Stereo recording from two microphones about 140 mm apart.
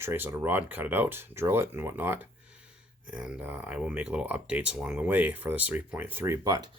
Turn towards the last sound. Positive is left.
turn(degrees=-25)  # may be behind; listen again after turning